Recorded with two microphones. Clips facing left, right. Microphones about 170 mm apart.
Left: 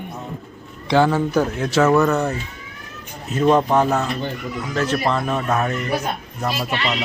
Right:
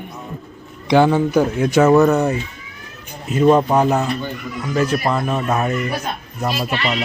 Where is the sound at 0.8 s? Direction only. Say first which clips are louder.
Right 3 dB; 15° right (ahead or behind).